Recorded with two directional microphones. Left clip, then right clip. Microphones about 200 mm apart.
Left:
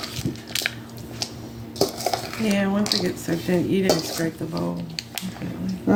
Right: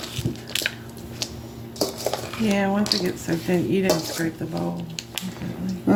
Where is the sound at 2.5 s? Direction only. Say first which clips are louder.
Right 1 dB; 15° left (ahead or behind).